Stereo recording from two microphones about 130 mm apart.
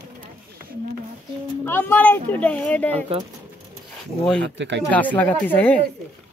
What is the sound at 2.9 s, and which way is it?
Speech, 50° right (ahead or behind).